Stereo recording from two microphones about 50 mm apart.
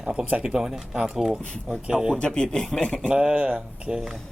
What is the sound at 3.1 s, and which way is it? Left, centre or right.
Speech, centre.